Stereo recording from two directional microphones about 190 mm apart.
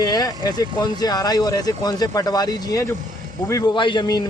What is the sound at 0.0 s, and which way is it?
Speech, 20° left (ahead or behind).